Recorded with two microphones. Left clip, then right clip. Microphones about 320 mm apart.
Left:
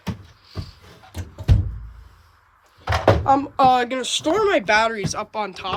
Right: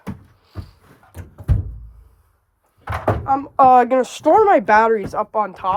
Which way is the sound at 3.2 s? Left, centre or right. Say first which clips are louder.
Right 1 dB; centre.